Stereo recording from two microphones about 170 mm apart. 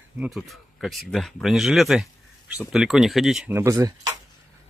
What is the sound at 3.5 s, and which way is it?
Speech, 15° right (ahead or behind).